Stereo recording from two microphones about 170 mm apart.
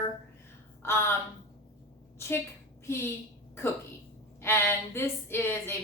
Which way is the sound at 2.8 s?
15° left (ahead or behind).